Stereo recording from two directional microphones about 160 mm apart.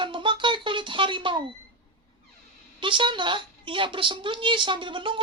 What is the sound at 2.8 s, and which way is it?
A woman's voice, 30° right (ahead or behind).